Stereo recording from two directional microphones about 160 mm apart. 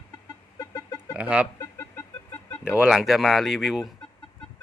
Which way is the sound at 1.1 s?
5° right (ahead or behind).